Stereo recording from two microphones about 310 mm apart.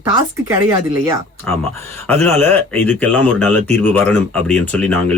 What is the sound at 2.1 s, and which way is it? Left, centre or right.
Speech, centre.